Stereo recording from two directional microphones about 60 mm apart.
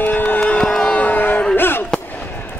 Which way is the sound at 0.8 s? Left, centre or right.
Left.